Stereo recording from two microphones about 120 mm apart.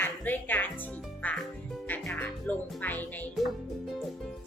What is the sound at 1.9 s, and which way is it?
Music, 15° left (ahead or behind).